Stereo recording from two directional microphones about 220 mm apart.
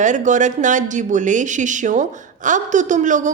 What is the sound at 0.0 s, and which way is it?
A woman's voice, 35° right (ahead or behind).